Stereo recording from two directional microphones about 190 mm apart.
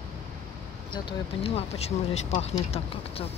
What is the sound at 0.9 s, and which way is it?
Speech, 30° left (ahead or behind).